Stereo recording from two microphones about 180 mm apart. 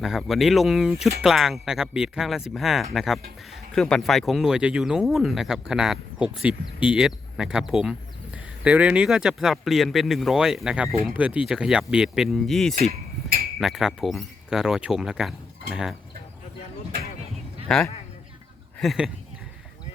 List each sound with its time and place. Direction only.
0.0 s speech: centre (ahead or behind)
12.7 s a sound: 55° right (ahead or behind)
13.6 s speech: centre (ahead or behind)
18.8 s speech: centre (ahead or behind)